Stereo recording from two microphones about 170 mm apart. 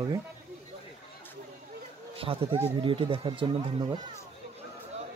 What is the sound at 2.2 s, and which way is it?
Speech, 35° right (ahead or behind).